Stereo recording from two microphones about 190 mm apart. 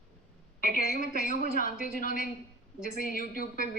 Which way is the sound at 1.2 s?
45° left (ahead or behind).